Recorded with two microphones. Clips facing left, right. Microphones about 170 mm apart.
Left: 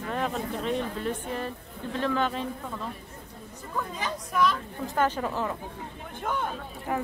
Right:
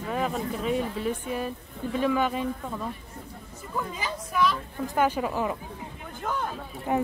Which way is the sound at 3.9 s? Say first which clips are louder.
Left 1 dB; 5° right (ahead or behind).